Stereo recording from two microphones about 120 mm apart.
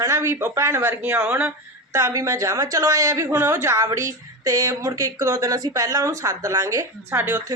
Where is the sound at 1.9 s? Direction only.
25° right (ahead or behind).